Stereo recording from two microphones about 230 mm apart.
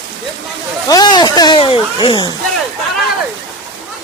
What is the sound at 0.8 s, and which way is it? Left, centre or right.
Speech, centre.